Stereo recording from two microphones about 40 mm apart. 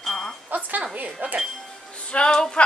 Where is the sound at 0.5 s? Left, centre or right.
Right.